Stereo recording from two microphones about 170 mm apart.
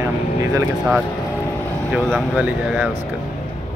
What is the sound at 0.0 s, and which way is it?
Vehicle, 20° right (ahead or behind).